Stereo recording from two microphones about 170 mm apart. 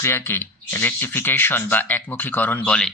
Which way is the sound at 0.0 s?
15° left (ahead or behind).